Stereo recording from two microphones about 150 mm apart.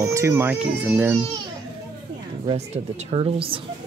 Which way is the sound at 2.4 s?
45° right (ahead or behind).